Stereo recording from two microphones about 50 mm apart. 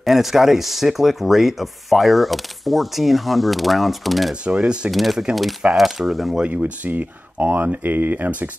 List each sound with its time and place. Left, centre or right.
0.0 s speech: centre
4.5 s speech: right
4.9 s speech: centre
6.4 s speech: right